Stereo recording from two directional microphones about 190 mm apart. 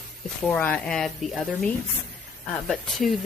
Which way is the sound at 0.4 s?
10° left (ahead or behind).